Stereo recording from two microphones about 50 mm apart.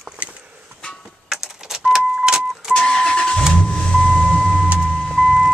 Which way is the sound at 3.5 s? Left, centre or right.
Centre.